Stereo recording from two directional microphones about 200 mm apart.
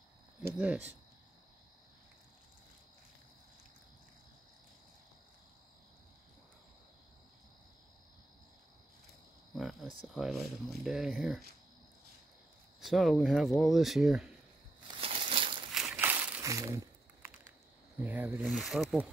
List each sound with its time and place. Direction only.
0.4 s speech: 5° right (ahead or behind)
9.6 s a sound: centre (ahead or behind)
10.0 s speech: centre (ahead or behind)
12.8 s speech: centre (ahead or behind)
14.9 s crumpling: 30° right (ahead or behind)
15.7 s crumpling: 5° right (ahead or behind)
18.0 s speech: 10° right (ahead or behind)